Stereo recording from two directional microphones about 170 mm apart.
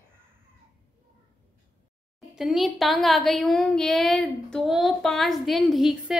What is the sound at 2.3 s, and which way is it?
A woman's voice, centre (ahead or behind).